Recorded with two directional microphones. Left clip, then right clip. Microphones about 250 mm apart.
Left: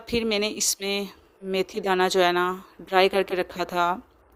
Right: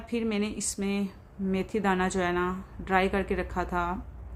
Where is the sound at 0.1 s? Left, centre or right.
Left.